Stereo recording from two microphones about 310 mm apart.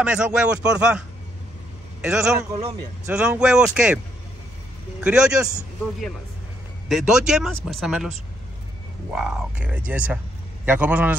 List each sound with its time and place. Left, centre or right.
0.0 s a man's voice: centre
5.0 s speech: centre
9.1 s speech: centre